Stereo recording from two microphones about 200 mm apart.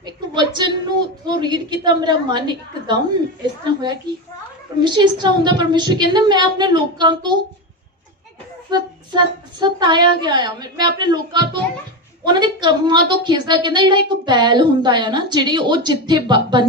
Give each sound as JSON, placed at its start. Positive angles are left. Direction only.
{"t": 0.0, "sound": "a woman's voice", "side_deg": -20}
{"t": 4.8, "sound": "a woman's voice", "side_deg": -20}
{"t": 8.7, "sound": "a woman's voice", "side_deg": -20}